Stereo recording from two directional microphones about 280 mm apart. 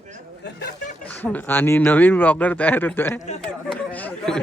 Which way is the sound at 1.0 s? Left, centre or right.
Centre.